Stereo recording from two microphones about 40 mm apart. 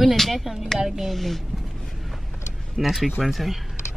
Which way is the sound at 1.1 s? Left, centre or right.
Centre.